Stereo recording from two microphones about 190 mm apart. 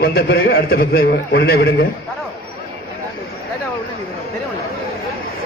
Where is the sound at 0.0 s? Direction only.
55° left (ahead or behind).